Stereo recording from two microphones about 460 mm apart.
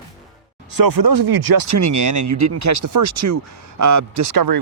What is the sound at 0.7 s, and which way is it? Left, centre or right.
Speech, right.